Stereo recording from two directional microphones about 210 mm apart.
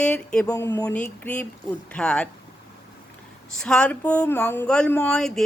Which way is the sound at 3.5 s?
5° left (ahead or behind).